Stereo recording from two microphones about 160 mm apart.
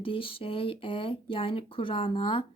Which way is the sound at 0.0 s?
35° left (ahead or behind).